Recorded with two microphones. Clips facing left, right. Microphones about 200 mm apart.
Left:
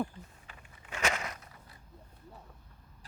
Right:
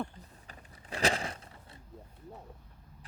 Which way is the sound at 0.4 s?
35° right (ahead or behind).